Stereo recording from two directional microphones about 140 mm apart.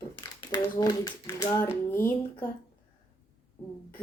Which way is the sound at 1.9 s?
15° left (ahead or behind).